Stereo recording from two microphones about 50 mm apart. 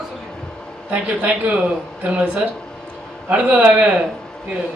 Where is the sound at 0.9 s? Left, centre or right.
Right.